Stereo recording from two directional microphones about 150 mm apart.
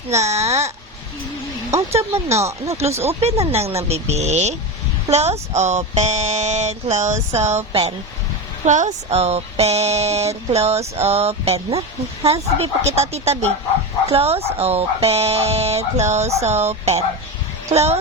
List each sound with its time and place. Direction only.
0.1 s speech: 50° right (ahead or behind)
2.3 s speech: 20° right (ahead or behind)
3.1 s speech: 45° right (ahead or behind)
8.6 s speech: 55° right (ahead or behind)